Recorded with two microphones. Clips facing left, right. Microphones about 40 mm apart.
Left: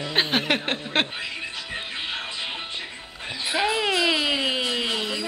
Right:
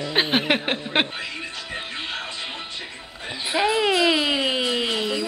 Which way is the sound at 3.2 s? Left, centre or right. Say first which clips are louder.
Right 2 dB; centre.